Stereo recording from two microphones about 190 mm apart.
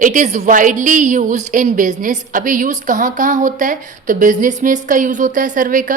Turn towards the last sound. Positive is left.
turn(degrees=-45)  # may be behind; listen again after turning